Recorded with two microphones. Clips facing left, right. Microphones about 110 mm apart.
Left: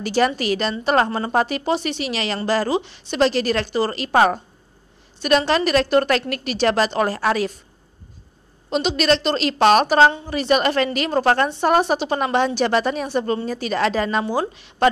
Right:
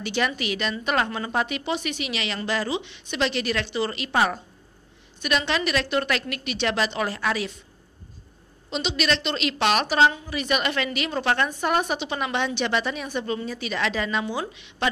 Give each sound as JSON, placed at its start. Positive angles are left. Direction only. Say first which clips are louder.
{"t": 0.0, "sound": "a woman's voice", "louder": "left 7 dB", "side_deg": 40}
{"t": 8.6, "sound": "a woman's voice", "louder": "left 7 dB", "side_deg": 45}